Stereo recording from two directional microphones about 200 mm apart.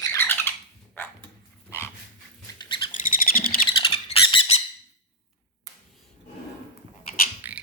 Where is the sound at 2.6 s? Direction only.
25° left (ahead or behind).